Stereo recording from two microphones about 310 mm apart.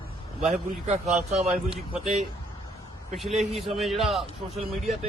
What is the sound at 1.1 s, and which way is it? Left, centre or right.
Speech, centre.